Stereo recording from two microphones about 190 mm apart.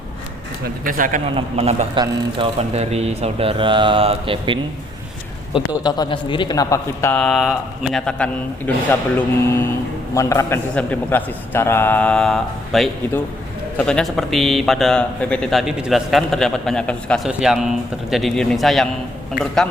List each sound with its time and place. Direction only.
0.6 s speech: 45° right (ahead or behind)
1.4 s a man's voice: 35° right (ahead or behind)
5.5 s a man's voice: 25° left (ahead or behind); by 9.0 s 5° left (ahead or behind)
10.2 s a man's voice: 15° left (ahead or behind); by 19.6 s centre (ahead or behind)